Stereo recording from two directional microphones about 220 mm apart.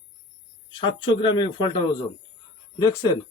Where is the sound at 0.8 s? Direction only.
20° left (ahead or behind).